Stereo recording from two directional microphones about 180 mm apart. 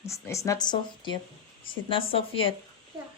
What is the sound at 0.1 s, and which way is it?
Speech, 15° left (ahead or behind).